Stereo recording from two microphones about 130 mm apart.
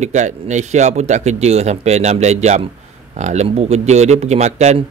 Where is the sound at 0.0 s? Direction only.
65° right (ahead or behind).